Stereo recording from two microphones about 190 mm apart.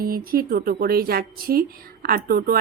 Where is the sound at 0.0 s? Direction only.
50° right (ahead or behind).